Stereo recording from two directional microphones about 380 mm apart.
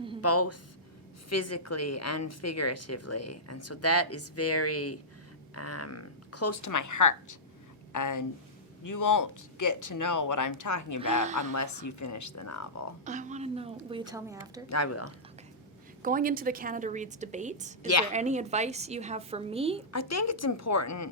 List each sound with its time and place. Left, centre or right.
0.2 s a woman's voice: left
11.2 s a woman's voice: centre
11.5 s speech: left
13.1 s a woman's voice: centre
14.7 s a woman's voice: left
16.0 s a woman's voice: right
19.9 s speech: left